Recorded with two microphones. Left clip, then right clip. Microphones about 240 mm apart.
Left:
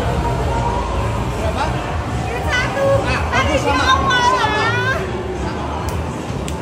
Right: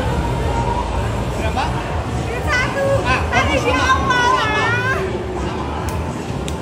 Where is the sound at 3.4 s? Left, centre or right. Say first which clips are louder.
Left 2 dB; centre.